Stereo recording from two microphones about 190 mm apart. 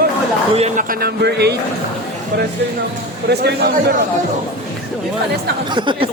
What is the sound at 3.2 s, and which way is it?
Speech, 55° right (ahead or behind).